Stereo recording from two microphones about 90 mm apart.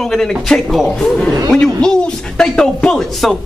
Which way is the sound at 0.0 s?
5° left (ahead or behind).